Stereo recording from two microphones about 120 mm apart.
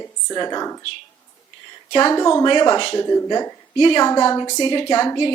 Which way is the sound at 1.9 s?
35° left (ahead or behind).